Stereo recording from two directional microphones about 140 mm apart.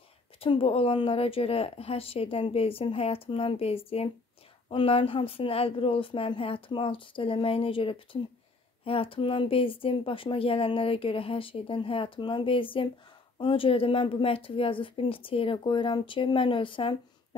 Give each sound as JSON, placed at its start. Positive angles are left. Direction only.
{"t": 0.4, "sound": "speech", "side_deg": 40}